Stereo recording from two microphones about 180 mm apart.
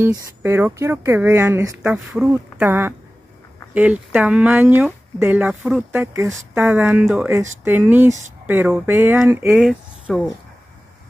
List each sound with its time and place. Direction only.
0.0 s speech: 15° right (ahead or behind)